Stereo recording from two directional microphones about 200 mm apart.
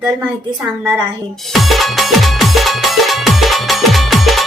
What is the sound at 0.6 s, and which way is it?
Speech, 5° right (ahead or behind).